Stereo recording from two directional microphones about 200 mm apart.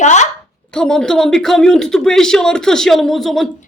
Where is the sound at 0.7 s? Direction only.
5° left (ahead or behind).